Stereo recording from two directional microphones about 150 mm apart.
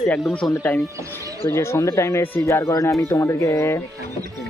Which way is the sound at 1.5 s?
20° left (ahead or behind).